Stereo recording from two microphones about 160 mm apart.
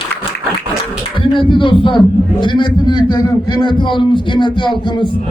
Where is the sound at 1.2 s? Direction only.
30° left (ahead or behind).